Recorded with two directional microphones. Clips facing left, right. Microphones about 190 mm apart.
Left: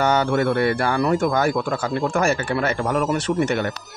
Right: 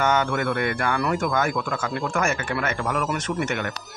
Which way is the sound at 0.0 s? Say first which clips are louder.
Left 4 dB; 35° left (ahead or behind).